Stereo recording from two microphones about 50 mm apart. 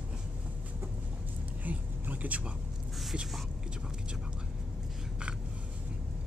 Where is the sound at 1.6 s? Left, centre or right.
Right.